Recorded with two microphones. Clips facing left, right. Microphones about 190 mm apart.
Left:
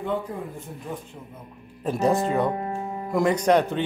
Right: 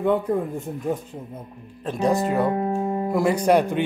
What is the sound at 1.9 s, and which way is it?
Speech, 5° left (ahead or behind).